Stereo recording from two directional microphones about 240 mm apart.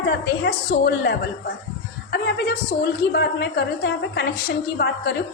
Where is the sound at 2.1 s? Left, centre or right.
Left.